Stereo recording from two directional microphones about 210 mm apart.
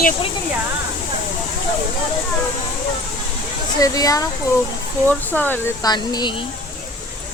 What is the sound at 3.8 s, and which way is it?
Speech, 15° left (ahead or behind).